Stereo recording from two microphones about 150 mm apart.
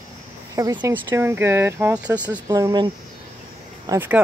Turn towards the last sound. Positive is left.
turn(degrees=-15)  # may be behind; listen again after turning